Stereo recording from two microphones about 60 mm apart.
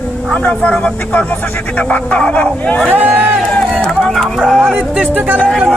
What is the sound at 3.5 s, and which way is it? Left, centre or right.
Music, centre.